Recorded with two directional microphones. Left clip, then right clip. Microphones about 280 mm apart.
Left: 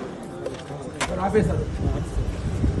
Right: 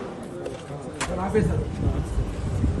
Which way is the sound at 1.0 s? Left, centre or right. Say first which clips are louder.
Left 3 dB; centre.